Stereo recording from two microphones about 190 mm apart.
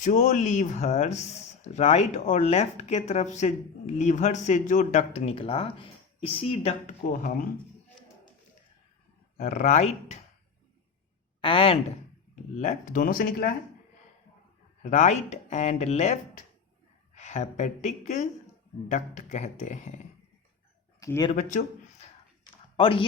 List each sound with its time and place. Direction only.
0.0 s speech: 40° left (ahead or behind)
7.0 s speech: 45° left (ahead or behind)
9.4 s speech: 35° left (ahead or behind)
11.3 s a woman's voice: 30° left (ahead or behind)
12.5 s speech: 40° left (ahead or behind)
14.8 s speech: 40° left (ahead or behind)
17.2 s speech: 40° left (ahead or behind)
21.0 s speech: 20° left (ahead or behind)
22.8 s speech: 30° left (ahead or behind)